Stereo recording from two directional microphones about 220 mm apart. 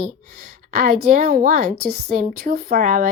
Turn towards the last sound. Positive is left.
turn(degrees=-40)  # may be behind; listen again after turning